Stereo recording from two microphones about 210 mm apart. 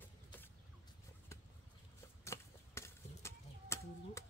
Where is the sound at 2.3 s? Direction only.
15° left (ahead or behind).